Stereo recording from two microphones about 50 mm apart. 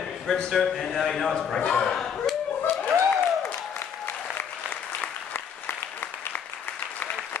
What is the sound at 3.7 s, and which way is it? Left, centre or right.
Applause, left.